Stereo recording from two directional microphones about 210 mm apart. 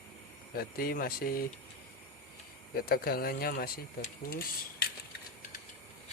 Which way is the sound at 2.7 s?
45° left (ahead or behind).